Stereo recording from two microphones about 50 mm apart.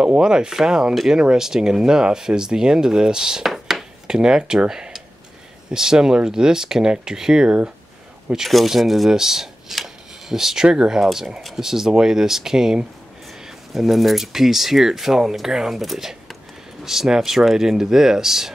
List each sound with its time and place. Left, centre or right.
0.0 s speech: centre
4.2 s speech: centre
8.5 s speech: centre
11.1 s speech: centre